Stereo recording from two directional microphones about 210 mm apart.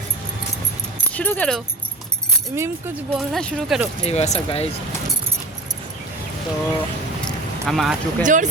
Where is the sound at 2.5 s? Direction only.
10° right (ahead or behind).